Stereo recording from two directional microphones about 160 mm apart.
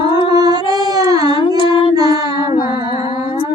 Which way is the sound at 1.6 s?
35° left (ahead or behind).